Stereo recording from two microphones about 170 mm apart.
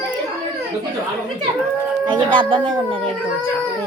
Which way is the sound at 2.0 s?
30° right (ahead or behind).